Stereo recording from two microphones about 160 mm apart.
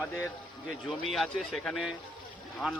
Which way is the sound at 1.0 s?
Centre (ahead or behind).